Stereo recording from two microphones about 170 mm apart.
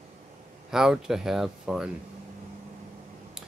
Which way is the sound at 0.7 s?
5° right (ahead or behind).